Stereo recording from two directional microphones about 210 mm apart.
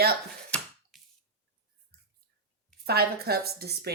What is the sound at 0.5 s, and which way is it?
Finger snapping, centre (ahead or behind).